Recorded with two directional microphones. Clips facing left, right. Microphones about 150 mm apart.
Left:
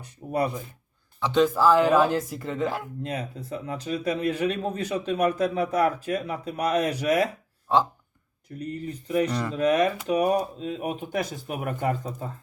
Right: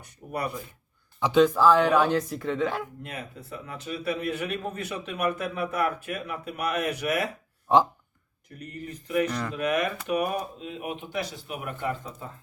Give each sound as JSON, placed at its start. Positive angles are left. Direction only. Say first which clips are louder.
{"t": 0.0, "sound": "speech", "louder": "left 5 dB", "side_deg": 30}
{"t": 1.3, "sound": "speech", "louder": "even", "side_deg": 0}
{"t": 3.0, "sound": "a man's voice", "louder": "left 6 dB", "side_deg": 35}
{"t": 7.7, "sound": "speech", "louder": "right 2 dB", "side_deg": -20}
{"t": 8.5, "sound": "a man's voice", "louder": "left 6 dB", "side_deg": 30}